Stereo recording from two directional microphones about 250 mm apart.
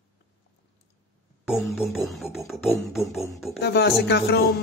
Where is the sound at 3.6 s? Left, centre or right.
Left.